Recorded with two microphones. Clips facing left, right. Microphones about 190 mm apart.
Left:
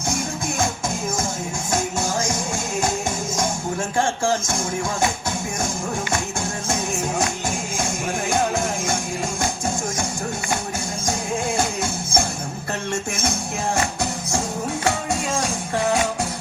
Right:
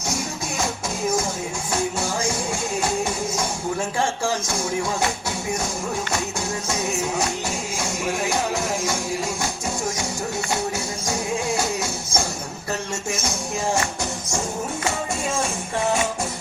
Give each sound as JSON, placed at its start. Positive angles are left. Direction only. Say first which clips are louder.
{"t": 0.6, "sound": "music", "louder": "right 1 dB", "side_deg": 50}
{"t": 3.9, "sound": "music", "louder": "left 6 dB", "side_deg": 50}
{"t": 6.7, "sound": "music", "louder": "left 1 dB", "side_deg": 50}
{"t": 8.3, "sound": "music", "louder": "left 2 dB", "side_deg": 50}